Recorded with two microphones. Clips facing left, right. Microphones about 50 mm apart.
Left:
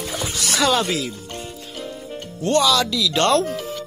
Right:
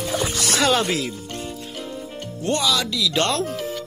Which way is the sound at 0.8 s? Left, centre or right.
Centre.